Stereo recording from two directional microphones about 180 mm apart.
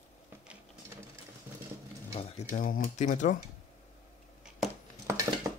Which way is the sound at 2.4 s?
50° left (ahead or behind).